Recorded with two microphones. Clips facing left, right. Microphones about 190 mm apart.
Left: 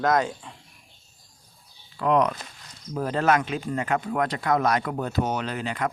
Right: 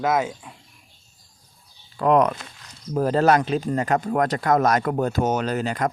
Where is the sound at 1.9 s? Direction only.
45° right (ahead or behind).